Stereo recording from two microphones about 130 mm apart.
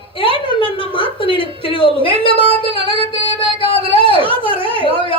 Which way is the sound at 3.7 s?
40° left (ahead or behind).